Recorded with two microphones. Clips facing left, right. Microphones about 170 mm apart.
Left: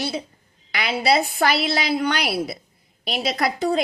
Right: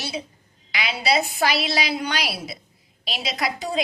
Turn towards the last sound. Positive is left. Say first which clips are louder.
# left 5 dB
turn(degrees=55)  # may be behind; listen again after turning